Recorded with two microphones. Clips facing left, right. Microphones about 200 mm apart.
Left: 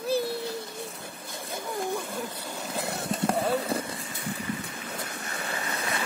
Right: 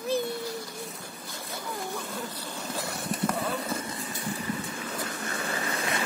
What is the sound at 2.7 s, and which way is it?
Vehicle, 25° left (ahead or behind).